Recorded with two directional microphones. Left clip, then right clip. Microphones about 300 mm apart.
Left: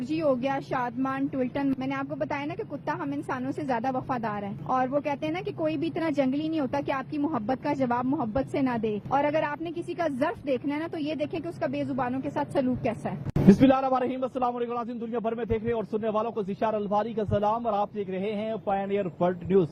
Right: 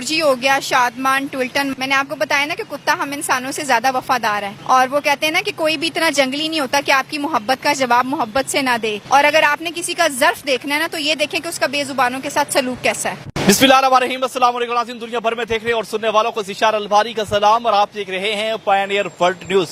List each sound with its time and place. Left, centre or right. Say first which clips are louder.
0.2 s speech: right 12 dB; centre
7.9 s speech: right 12 dB; centre